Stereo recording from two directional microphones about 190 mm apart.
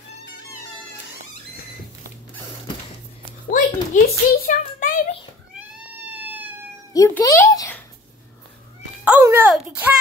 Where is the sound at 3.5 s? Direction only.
45° left (ahead or behind).